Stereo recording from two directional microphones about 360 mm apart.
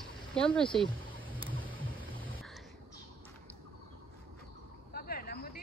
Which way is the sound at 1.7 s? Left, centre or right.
Centre.